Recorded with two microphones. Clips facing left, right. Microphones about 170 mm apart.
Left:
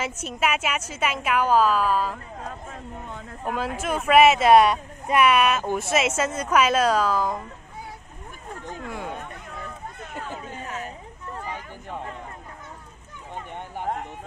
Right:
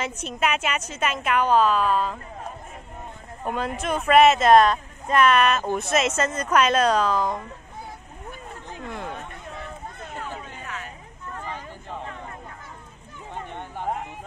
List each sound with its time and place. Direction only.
0.0 s a woman's voice: 5° left (ahead or behind)
3.4 s speech: 5° left (ahead or behind)
8.8 s speech: 5° left (ahead or behind)